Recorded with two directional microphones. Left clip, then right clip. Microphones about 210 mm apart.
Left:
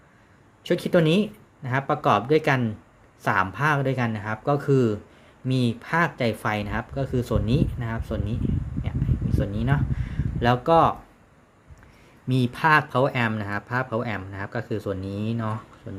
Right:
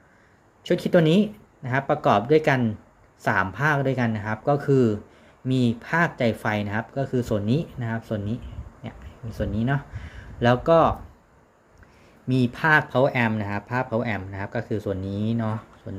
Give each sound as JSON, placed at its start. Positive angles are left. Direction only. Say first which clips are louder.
{"t": 0.6, "sound": "speech", "louder": "right 1 dB", "side_deg": 0}
{"t": 12.3, "sound": "speech", "louder": "even", "side_deg": 0}